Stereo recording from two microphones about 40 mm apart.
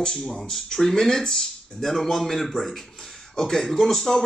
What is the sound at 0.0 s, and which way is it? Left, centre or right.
A man's voice, left.